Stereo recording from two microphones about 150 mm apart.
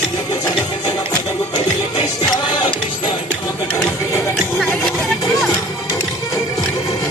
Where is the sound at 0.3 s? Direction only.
25° left (ahead or behind).